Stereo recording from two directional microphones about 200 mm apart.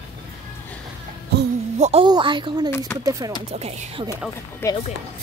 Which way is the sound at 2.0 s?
25° right (ahead or behind).